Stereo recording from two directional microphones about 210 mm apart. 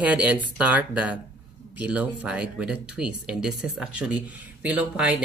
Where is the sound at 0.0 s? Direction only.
5° right (ahead or behind).